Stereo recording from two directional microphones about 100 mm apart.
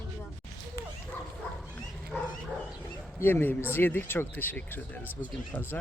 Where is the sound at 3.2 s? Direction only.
20° left (ahead or behind).